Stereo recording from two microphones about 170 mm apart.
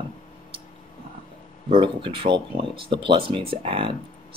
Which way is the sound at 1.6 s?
30° right (ahead or behind).